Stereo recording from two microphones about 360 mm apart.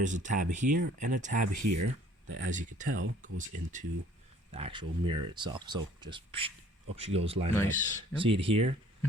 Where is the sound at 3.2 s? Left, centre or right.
Right.